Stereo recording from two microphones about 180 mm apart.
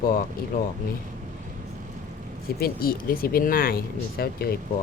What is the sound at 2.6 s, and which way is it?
Speech, 55° left (ahead or behind).